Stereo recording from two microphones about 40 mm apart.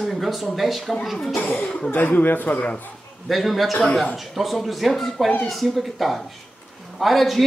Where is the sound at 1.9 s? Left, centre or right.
Left.